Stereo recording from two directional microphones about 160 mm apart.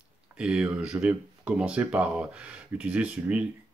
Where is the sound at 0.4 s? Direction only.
5° right (ahead or behind).